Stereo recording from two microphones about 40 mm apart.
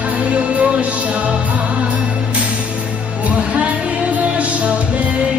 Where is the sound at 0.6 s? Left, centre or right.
Right.